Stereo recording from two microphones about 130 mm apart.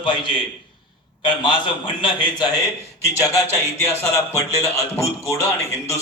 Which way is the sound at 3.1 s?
25° left (ahead or behind).